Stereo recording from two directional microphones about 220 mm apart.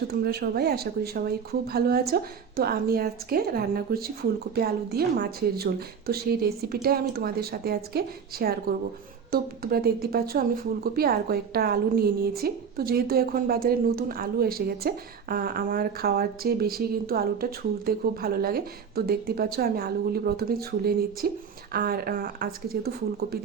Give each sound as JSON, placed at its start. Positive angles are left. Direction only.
{"t": 0.1, "sound": "speech", "side_deg": -45}